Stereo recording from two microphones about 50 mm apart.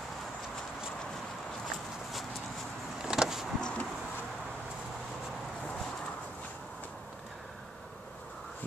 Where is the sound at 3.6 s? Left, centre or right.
Centre.